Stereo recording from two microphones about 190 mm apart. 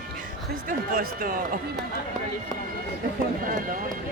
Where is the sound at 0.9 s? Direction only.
45° right (ahead or behind).